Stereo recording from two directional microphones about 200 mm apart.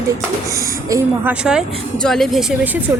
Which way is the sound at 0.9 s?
5° right (ahead or behind).